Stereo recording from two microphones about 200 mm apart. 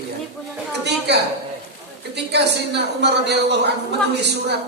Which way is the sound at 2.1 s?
55° right (ahead or behind).